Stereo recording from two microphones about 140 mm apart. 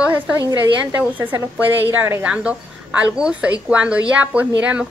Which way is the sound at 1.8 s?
15° right (ahead or behind).